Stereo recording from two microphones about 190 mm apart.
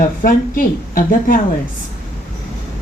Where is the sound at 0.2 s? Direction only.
45° left (ahead or behind).